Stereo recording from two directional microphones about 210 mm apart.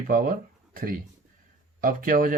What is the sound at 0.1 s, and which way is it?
Speech, 40° right (ahead or behind).